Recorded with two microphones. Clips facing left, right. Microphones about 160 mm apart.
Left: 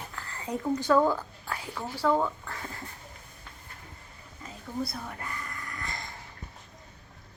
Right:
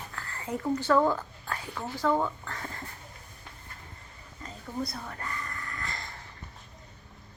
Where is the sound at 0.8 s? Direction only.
15° left (ahead or behind).